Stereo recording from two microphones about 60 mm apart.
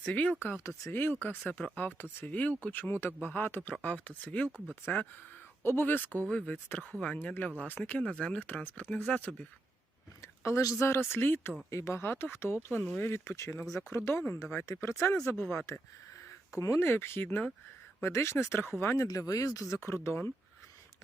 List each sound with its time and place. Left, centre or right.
0.0 s speech: left
2.8 s speech: left
5.6 s speech: left
6.2 s speech: centre
6.7 s speech: left
10.2 s a sound: left
11.1 s speech: left
11.7 s speech: left
12.0 s speech: left
15.7 s speech: left
16.8 s speech: left
18.0 s speech: left
19.0 s speech: left
19.9 s speech: left